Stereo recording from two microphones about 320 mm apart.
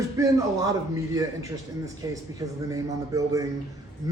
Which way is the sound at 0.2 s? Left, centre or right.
Centre.